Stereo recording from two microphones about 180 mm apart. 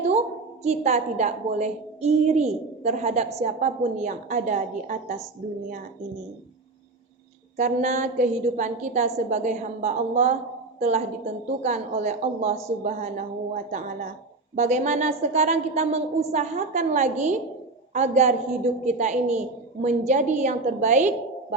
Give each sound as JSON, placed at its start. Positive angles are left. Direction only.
{"t": 0.6, "sound": "a woman's voice", "side_deg": -40}
{"t": 7.5, "sound": "a woman's voice", "side_deg": -40}